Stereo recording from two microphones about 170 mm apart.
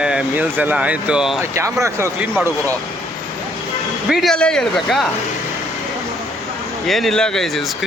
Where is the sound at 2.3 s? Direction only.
5° left (ahead or behind).